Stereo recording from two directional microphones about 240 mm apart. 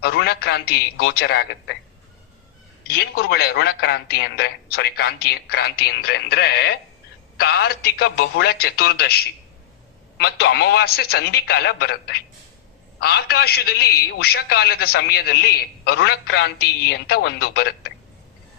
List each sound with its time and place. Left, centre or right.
0.0 s a man's voice: left
2.8 s a man's voice: left